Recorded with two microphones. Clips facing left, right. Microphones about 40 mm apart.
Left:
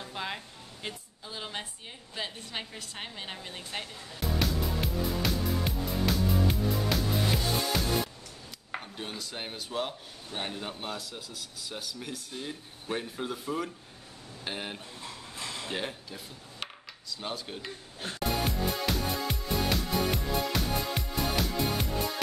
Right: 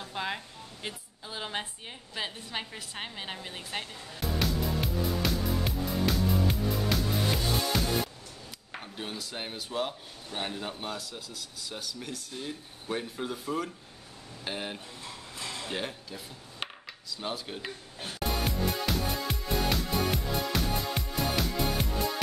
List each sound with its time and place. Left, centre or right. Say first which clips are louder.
0.0 s music: right 2 dB; centre
0.8 s a woman's voice: even; centre
2.1 s a sound: right 1 dB; centre
7.3 s music: even; centre
8.9 s a man's voice: right 1 dB; centre
18.4 s music: even; centre